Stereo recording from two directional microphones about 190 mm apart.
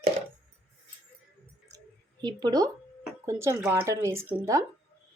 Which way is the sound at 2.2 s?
20° right (ahead or behind).